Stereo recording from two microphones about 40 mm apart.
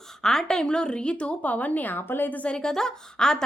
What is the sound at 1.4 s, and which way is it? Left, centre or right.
Speech, left.